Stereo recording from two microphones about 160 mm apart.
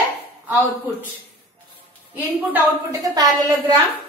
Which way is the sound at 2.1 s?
10° right (ahead or behind).